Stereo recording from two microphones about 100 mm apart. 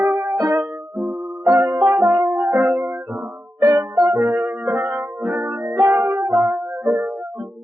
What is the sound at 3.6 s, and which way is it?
Music, 45° right (ahead or behind).